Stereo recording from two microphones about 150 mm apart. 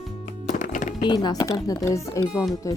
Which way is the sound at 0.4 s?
60° left (ahead or behind).